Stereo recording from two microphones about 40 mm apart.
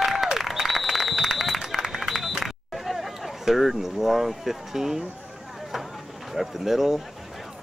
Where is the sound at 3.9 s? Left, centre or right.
Centre.